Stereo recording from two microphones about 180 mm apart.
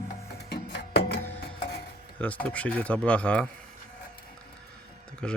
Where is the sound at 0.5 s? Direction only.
65° left (ahead or behind).